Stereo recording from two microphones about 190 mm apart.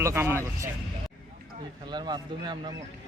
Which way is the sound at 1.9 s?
20° right (ahead or behind).